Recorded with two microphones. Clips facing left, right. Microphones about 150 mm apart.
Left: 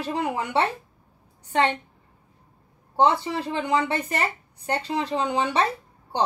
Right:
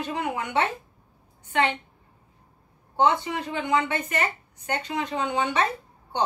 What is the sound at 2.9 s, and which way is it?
Speech, 35° left (ahead or behind).